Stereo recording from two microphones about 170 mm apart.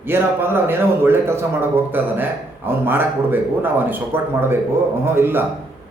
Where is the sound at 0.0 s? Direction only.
15° right (ahead or behind).